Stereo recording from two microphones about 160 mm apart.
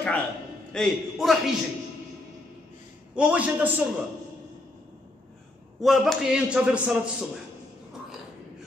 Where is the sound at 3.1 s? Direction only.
5° right (ahead or behind).